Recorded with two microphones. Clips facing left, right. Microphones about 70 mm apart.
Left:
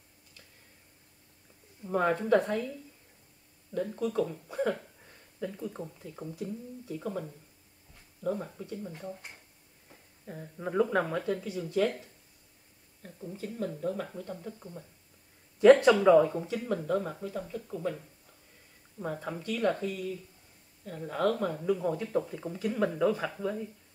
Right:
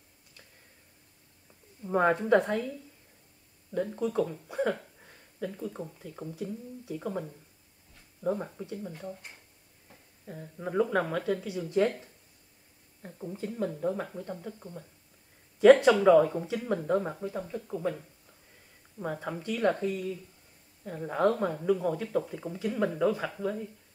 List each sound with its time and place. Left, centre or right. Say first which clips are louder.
1.8 s speech: right 3 dB; centre
3.7 s speech: right 1 dB; centre
6.9 s speech: right 1 dB; centre
8.2 s speech: right 2 dB; right
8.5 s speech: right 1 dB; centre
10.2 s speech: even; centre
11.2 s speech: right 2 dB; centre
13.0 s speech: right 3 dB; right
14.3 s speech: right 1 dB; centre
16.6 s speech: right 3 dB; centre
18.9 s speech: right 1 dB; centre
19.6 s speech: right 2 dB; right
21.5 s speech: right 2 dB; centre